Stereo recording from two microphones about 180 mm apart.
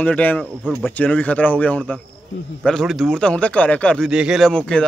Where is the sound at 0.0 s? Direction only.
10° left (ahead or behind).